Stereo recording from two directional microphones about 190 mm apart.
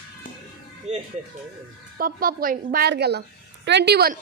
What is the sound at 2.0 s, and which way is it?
Speech, 50° right (ahead or behind).